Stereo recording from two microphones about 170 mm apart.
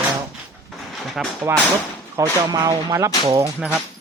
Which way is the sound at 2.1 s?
25° right (ahead or behind).